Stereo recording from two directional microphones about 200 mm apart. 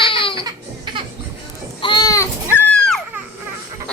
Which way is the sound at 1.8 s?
20° left (ahead or behind).